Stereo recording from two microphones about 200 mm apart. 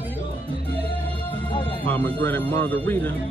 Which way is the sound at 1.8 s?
10° left (ahead or behind).